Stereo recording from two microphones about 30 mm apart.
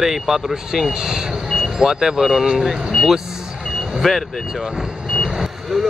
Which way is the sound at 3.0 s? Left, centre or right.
Centre.